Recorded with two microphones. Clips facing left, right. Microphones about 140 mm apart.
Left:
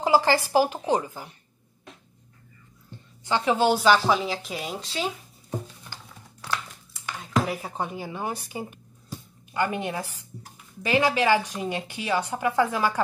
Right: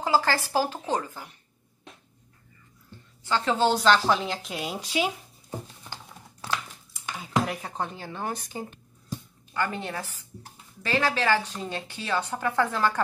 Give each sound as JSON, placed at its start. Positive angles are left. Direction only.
{"t": 0.0, "sound": "a woman's voice", "side_deg": 15}
{"t": 3.3, "sound": "a woman's voice", "side_deg": 15}
{"t": 4.7, "sound": "speech", "side_deg": -10}
{"t": 7.2, "sound": "a woman's voice", "side_deg": 5}